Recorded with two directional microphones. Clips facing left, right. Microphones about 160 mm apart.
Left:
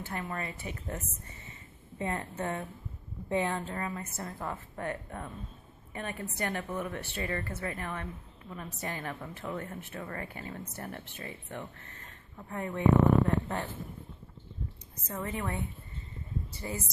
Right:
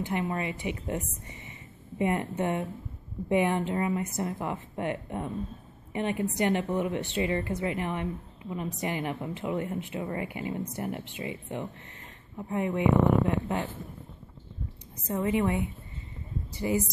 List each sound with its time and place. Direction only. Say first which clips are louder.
0.0 s speech: right 7 dB; 15° right (ahead or behind)
15.2 s speech: right 9 dB; 15° right (ahead or behind)